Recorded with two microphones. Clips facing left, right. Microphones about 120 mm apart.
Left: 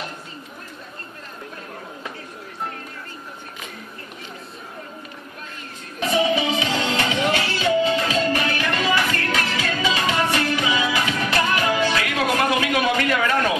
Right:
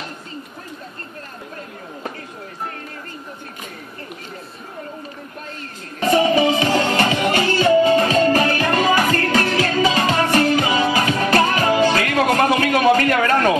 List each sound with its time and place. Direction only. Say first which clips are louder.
6.0 s music: right 5 dB; 50° right (ahead or behind)